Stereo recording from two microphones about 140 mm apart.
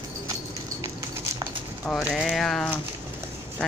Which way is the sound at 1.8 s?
10° left (ahead or behind).